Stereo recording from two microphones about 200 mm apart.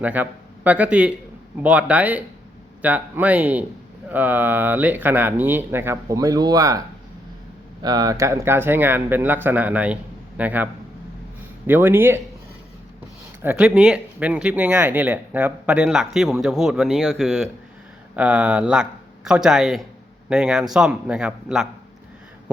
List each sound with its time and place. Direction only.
0.0 s speech: 10° right (ahead or behind)
13.4 s speech: 10° right (ahead or behind)